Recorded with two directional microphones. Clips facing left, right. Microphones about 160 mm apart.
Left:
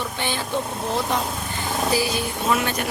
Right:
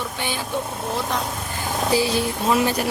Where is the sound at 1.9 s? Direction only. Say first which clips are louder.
Right 6 dB; 30° right (ahead or behind).